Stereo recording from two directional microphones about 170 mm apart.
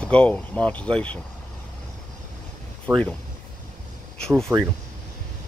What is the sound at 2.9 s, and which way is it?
Speech, 5° right (ahead or behind).